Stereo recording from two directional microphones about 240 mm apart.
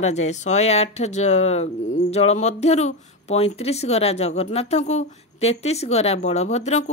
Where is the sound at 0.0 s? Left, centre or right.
Left.